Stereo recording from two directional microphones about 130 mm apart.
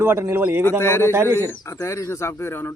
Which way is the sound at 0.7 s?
20° left (ahead or behind).